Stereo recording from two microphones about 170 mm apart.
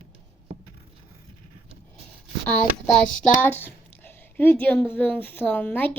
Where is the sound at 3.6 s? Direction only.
10° left (ahead or behind).